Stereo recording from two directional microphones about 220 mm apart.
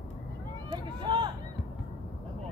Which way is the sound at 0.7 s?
20° right (ahead or behind).